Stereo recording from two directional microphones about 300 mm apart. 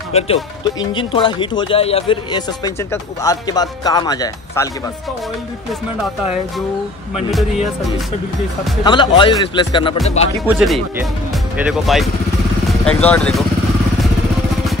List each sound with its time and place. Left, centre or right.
0.1 s speech: centre
8.8 s speech: centre
10.4 s speech: centre